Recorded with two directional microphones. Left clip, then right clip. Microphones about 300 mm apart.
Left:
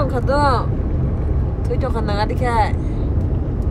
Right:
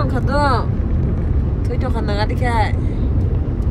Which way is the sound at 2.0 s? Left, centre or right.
Centre.